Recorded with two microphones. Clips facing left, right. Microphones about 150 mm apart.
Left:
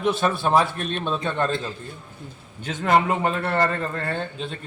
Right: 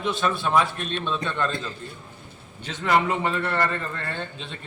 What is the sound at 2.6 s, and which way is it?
A man's voice, 45° left (ahead or behind).